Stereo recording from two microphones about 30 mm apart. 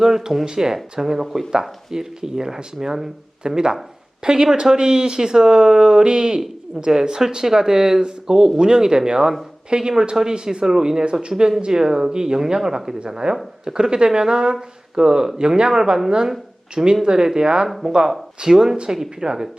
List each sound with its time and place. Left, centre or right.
0.0 s speech: centre
9.6 s speech: right
18.4 s speech: centre